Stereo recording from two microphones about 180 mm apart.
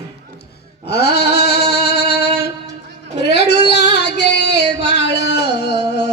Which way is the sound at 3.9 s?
70° left (ahead or behind).